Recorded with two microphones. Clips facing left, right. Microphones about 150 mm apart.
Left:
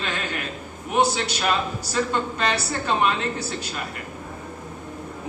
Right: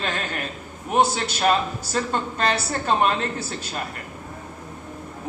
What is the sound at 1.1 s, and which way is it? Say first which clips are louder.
A man's voice: right 3 dB; 45° right (ahead or behind).